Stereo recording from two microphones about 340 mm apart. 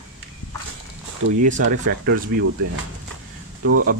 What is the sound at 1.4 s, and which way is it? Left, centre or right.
Speech, right.